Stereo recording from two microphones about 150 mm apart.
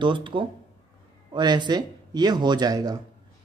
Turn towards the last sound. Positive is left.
turn(degrees=-25)  # may be behind; listen again after turning